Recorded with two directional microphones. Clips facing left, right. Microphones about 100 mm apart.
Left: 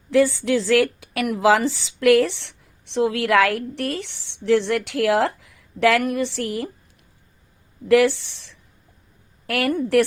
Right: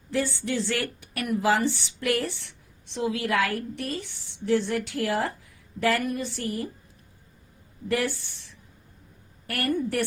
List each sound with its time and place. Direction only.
0.1 s speech: 90° left
7.9 s speech: 90° left